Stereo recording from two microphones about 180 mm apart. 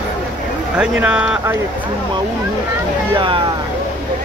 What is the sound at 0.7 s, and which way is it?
Speech, 5° right (ahead or behind).